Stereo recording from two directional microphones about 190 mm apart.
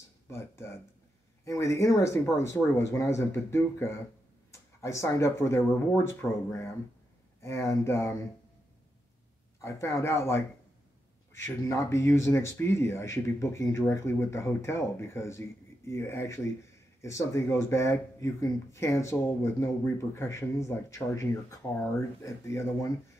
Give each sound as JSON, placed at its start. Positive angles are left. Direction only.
{"t": 0.3, "sound": "speech", "side_deg": 15}
{"t": 9.6, "sound": "speech", "side_deg": 15}
{"t": 11.4, "sound": "speech", "side_deg": 15}